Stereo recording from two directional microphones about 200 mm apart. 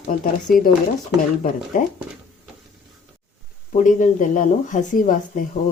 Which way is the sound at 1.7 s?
40° left (ahead or behind).